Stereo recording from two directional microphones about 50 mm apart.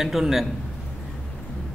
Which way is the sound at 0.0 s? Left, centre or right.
Centre.